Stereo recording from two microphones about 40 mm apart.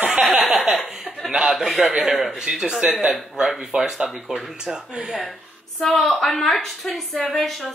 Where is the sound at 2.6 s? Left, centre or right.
Right.